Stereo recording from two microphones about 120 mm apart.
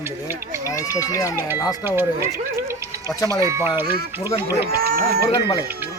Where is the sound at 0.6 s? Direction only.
25° left (ahead or behind).